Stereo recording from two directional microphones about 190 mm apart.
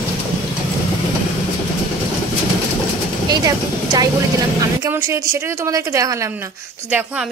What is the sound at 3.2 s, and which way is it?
A woman's voice, 20° right (ahead or behind).